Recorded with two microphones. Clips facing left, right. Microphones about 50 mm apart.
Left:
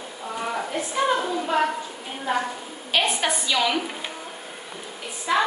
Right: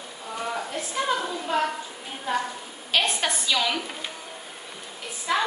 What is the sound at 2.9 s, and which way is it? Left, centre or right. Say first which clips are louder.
Speech: left 2 dB; centre.